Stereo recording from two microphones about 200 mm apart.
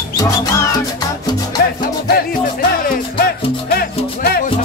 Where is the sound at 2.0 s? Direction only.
50° left (ahead or behind).